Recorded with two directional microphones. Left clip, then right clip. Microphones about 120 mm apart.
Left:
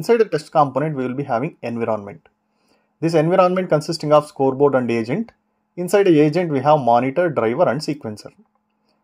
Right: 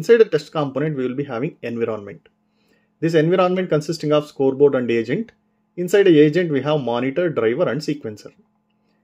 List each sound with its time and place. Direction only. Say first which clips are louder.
0.0 s speech: right 3 dB; 35° left (ahead or behind)